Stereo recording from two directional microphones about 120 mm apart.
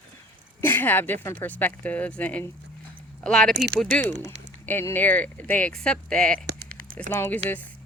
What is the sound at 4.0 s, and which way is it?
Speech, 80° right.